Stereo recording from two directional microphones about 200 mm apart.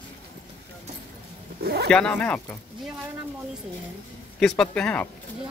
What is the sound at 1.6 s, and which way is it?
Speech, 50° right (ahead or behind).